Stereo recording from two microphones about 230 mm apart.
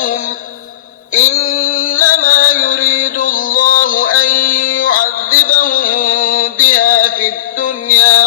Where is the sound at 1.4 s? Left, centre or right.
Left.